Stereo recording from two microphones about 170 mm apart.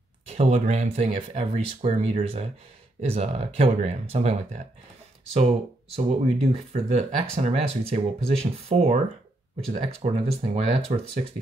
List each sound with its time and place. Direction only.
0.3 s speech: 40° right (ahead or behind)
5.9 s speech: 40° right (ahead or behind)